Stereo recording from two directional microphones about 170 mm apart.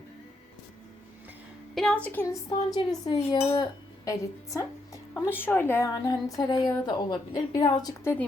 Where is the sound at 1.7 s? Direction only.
5° left (ahead or behind).